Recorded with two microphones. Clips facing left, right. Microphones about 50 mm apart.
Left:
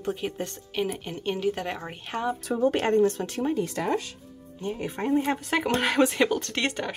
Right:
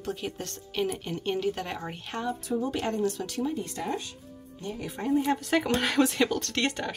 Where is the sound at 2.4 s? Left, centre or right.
Left.